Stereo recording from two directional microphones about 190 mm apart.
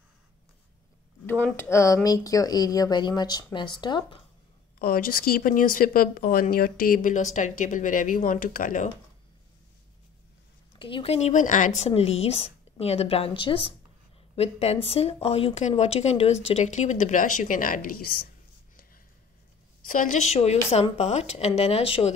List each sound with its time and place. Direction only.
1.4 s speech: 10° left (ahead or behind)
4.7 s speech: 50° left (ahead or behind)
10.8 s speech: 25° left (ahead or behind); by 18.2 s 50° left (ahead or behind)
19.9 s speech: 40° left (ahead or behind)